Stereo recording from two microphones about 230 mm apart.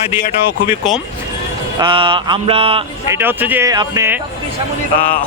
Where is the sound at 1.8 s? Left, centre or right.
Right.